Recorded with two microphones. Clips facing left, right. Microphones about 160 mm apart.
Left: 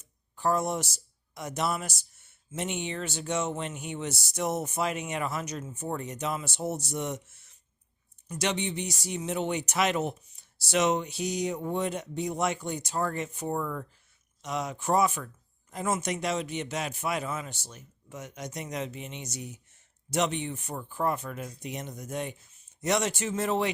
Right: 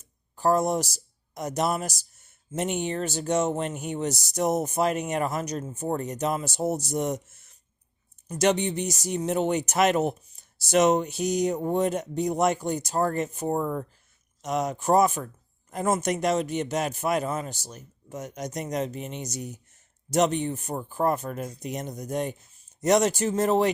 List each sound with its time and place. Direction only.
0.0 s speech: 40° right (ahead or behind)